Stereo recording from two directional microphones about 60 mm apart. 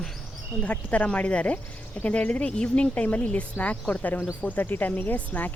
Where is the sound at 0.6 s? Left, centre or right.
Left.